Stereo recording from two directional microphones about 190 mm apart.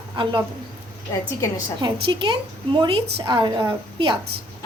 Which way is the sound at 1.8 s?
25° right (ahead or behind).